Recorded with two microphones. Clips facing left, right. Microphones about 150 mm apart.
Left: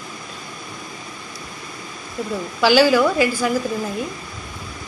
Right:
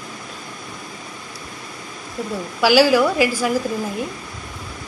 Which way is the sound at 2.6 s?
5° right (ahead or behind).